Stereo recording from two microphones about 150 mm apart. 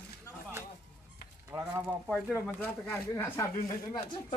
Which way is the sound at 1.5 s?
15° right (ahead or behind).